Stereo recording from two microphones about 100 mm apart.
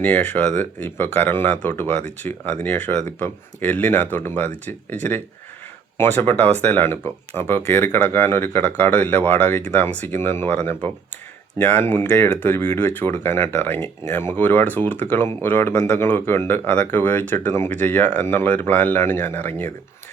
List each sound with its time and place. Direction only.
0.0 s speech: 15° left (ahead or behind)